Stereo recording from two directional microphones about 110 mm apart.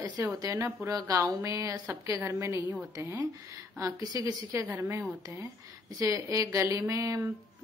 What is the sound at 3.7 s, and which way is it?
A woman's voice, 30° right (ahead or behind).